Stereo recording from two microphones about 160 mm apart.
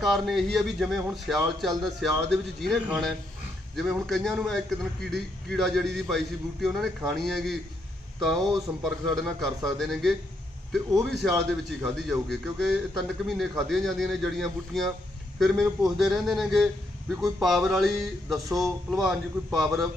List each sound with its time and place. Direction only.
0.0 s a man's voice: centre (ahead or behind)
8.4 s speech: 25° right (ahead or behind)
8.8 s a man's voice: centre (ahead or behind)